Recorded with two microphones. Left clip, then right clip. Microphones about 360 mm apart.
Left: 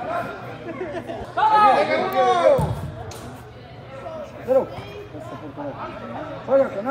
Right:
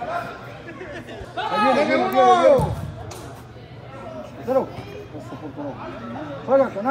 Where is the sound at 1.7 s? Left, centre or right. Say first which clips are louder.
Even; right.